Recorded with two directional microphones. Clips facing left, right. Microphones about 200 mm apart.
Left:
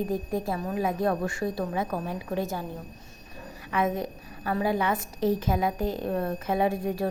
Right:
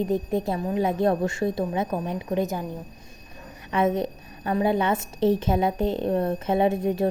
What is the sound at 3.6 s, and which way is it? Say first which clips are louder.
A woman's voice: right 4 dB; 25° right (ahead or behind).